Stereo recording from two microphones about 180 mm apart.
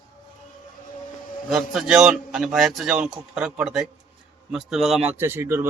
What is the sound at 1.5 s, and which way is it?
A man's voice, 5° right (ahead or behind).